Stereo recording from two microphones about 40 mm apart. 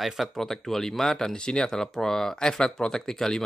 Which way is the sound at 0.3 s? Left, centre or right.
Centre.